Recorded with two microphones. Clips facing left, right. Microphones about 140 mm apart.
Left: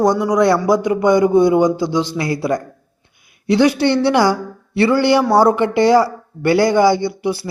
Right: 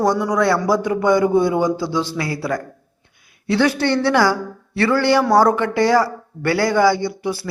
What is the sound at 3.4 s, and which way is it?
Speech, 15° left (ahead or behind).